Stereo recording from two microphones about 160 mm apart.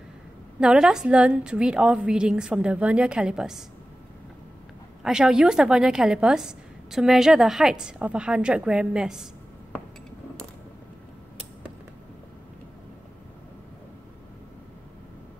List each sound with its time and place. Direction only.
0.6 s a woman's voice: 5° right (ahead or behind)
5.0 s a woman's voice: 5° right (ahead or behind)